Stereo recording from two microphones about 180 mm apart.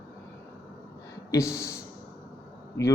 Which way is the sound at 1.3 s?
15° left (ahead or behind).